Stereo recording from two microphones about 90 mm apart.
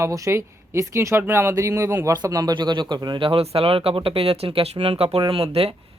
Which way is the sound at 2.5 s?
60° right (ahead or behind).